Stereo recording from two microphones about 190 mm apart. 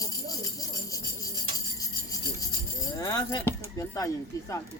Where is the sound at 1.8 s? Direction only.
20° left (ahead or behind).